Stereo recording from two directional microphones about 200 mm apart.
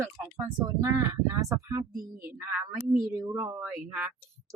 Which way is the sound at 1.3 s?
15° right (ahead or behind).